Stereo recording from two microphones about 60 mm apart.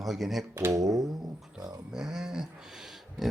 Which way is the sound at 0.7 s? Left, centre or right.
Right.